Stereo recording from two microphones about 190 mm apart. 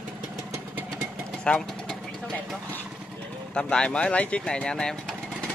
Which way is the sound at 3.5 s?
5° left (ahead or behind).